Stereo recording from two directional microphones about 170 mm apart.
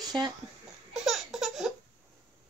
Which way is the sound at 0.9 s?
Centre (ahead or behind).